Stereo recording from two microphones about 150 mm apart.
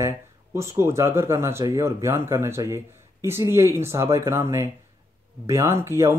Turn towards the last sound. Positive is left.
turn(degrees=-20)  # may be behind; listen again after turning